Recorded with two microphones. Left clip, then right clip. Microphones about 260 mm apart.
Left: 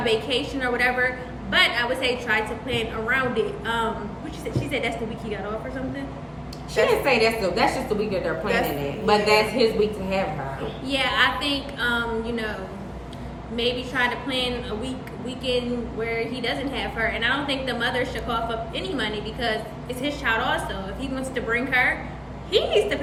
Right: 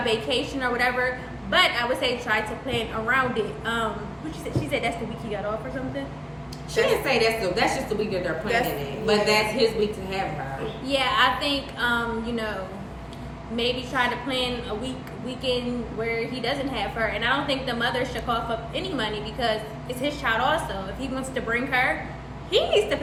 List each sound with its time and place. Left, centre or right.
0.0 s a woman's voice: centre
6.8 s a woman's voice: left
10.8 s a woman's voice: centre
13.6 s a woman's voice: centre
16.0 s a woman's voice: centre